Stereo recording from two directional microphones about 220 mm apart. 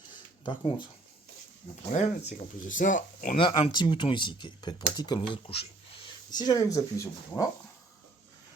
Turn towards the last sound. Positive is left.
turn(degrees=15)  # may be behind; listen again after turning